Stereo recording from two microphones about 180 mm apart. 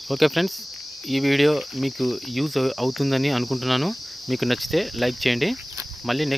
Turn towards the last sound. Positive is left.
turn(degrees=0)  # may be behind; listen again after turning